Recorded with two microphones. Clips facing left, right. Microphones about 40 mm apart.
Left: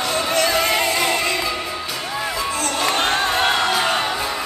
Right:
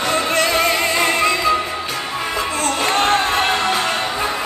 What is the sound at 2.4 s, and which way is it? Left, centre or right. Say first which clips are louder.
Music: right 3 dB; right.